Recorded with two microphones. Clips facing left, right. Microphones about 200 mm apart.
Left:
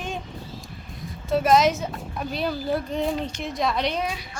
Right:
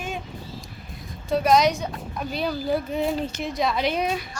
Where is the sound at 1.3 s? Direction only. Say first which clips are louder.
Even; centre (ahead or behind).